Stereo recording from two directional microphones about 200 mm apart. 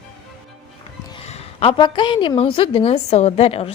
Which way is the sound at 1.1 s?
30° left (ahead or behind).